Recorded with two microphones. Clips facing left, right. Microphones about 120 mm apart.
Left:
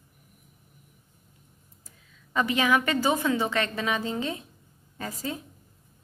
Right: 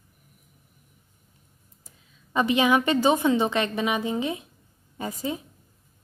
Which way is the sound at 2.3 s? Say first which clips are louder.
Right 3 dB; 20° right (ahead or behind).